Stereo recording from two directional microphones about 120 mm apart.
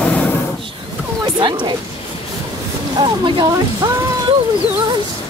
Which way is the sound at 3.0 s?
40° right (ahead or behind).